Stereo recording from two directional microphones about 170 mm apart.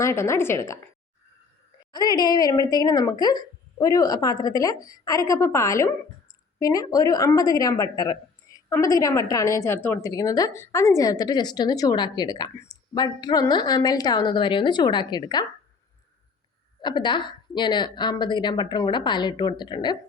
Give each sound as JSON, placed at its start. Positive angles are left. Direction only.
{"t": 0.0, "sound": "speech", "side_deg": 15}
{"t": 1.9, "sound": "speech", "side_deg": 25}
{"t": 16.8, "sound": "speech", "side_deg": 25}